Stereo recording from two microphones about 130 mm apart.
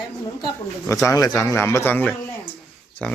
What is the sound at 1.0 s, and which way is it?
A man's voice, 30° left (ahead or behind).